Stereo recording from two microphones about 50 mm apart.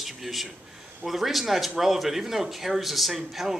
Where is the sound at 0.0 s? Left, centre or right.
Centre.